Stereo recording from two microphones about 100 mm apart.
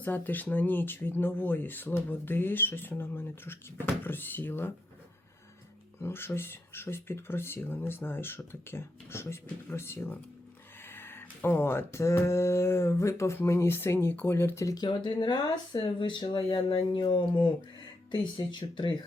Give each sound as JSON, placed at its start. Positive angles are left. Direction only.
{"t": 0.0, "sound": "speech", "side_deg": 20}
{"t": 6.0, "sound": "speech", "side_deg": 25}
{"t": 14.8, "sound": "speech", "side_deg": 50}